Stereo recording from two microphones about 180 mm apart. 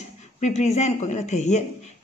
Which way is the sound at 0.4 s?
40° left (ahead or behind).